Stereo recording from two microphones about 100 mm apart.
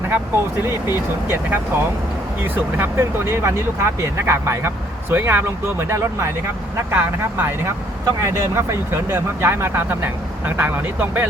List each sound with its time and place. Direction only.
0.6 s speech: 25° right (ahead or behind)
5.9 s speech: 30° right (ahead or behind)